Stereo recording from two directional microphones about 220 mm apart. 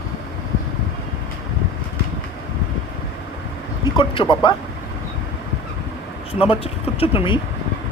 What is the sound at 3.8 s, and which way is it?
Speech, 20° left (ahead or behind).